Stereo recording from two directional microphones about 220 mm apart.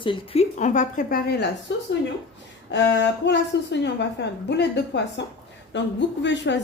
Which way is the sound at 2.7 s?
50° left (ahead or behind).